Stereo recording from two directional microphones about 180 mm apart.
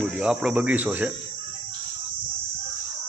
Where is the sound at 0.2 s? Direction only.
5° right (ahead or behind).